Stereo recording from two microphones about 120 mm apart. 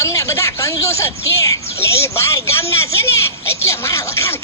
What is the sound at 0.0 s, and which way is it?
Speech, 25° left (ahead or behind).